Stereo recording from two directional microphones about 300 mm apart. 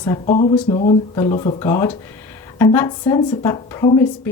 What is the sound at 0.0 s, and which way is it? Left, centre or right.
A woman's voice, centre.